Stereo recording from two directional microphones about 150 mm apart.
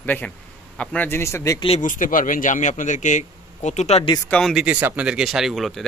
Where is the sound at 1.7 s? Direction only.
60° left (ahead or behind).